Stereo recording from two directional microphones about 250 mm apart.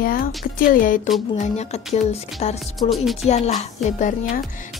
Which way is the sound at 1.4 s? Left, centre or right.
Left.